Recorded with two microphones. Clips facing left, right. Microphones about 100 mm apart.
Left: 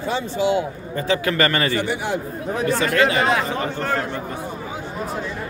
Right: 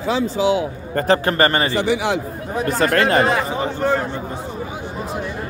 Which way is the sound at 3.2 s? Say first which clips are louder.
Right 1 dB; 5° right (ahead or behind).